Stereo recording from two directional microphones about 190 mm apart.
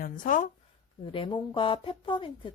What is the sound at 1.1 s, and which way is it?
Speech, 25° left (ahead or behind).